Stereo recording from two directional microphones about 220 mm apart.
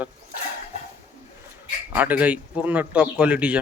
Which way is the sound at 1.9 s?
5° right (ahead or behind).